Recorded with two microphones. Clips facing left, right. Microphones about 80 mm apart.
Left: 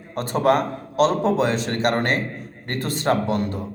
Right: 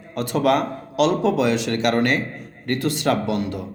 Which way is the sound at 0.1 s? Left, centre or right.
Left.